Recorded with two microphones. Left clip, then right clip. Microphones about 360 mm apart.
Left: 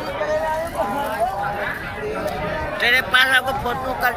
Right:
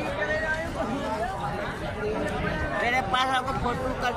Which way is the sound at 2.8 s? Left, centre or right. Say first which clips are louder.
Left 10 dB; centre.